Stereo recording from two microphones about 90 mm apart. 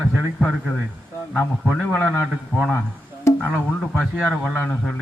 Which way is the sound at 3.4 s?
15° left (ahead or behind).